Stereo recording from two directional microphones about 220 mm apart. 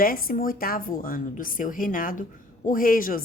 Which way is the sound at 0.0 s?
40° left (ahead or behind).